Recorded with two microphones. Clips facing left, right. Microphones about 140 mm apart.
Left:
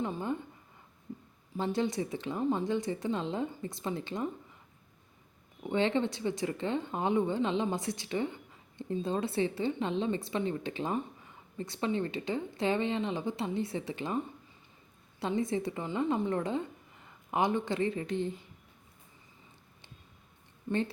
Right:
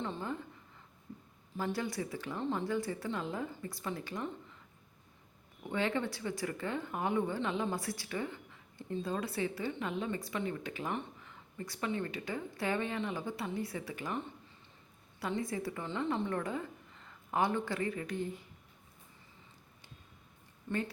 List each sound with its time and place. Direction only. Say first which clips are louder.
0.0 s speech: left 5 dB; 20° left (ahead or behind)
1.5 s speech: left 5 dB; 25° left (ahead or behind)
5.6 s speech: left 5 dB; 25° left (ahead or behind)
15.2 s speech: left 5 dB; 20° left (ahead or behind)
20.7 s a woman's voice: left 4 dB; 15° left (ahead or behind)